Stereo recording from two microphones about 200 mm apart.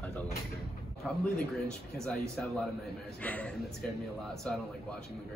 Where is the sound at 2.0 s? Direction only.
Centre (ahead or behind).